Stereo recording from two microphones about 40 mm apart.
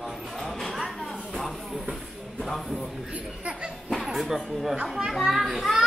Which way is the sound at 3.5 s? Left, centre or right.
Right.